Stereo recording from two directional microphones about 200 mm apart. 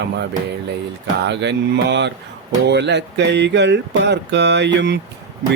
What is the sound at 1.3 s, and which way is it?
Mantra, 60° right (ahead or behind).